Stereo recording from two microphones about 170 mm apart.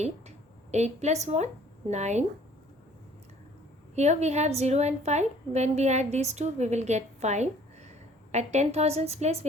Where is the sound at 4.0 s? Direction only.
40° right (ahead or behind).